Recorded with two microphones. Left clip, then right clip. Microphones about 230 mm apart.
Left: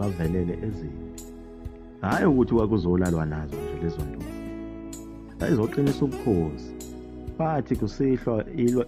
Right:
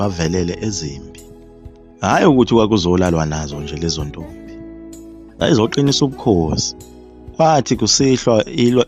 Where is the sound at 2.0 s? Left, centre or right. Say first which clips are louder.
Right 10 dB; right.